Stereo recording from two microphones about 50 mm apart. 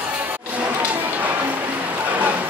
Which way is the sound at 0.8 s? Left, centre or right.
Right.